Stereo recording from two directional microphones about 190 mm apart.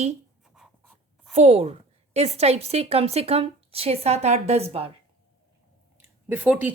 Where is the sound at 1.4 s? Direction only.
35° right (ahead or behind).